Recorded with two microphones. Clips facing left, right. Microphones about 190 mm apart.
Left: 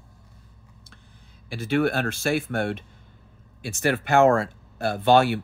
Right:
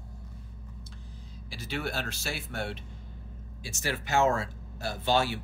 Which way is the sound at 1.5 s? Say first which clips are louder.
Left 12 dB; 55° left (ahead or behind).